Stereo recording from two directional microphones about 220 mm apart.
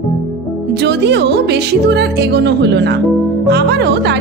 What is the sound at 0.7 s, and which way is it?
Speech, 50° right (ahead or behind).